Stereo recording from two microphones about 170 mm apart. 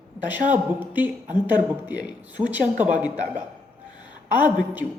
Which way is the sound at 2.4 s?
20° right (ahead or behind).